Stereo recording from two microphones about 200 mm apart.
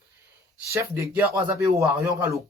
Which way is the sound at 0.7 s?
10° right (ahead or behind).